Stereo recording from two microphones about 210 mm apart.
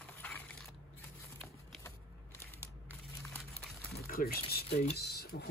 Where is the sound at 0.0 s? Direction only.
5° left (ahead or behind).